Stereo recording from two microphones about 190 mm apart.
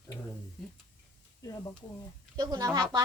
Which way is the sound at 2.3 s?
20° right (ahead or behind).